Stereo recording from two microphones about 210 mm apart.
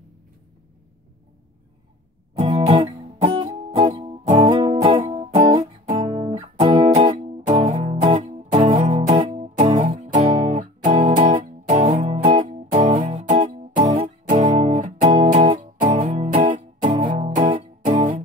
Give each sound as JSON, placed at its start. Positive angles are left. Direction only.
{"t": 2.5, "sound": "music", "side_deg": -25}
{"t": 14.4, "sound": "music", "side_deg": -25}
{"t": 14.7, "sound": "music", "side_deg": -35}